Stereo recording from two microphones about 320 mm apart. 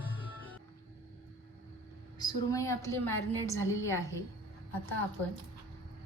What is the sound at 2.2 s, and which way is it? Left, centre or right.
A woman's voice, centre.